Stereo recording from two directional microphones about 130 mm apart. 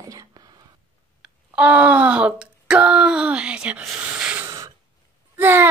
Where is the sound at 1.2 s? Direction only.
10° right (ahead or behind).